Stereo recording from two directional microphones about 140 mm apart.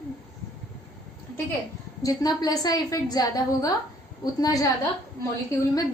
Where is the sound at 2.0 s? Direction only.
25° left (ahead or behind).